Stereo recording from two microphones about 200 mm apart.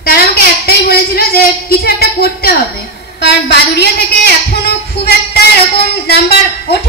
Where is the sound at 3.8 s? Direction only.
50° left (ahead or behind).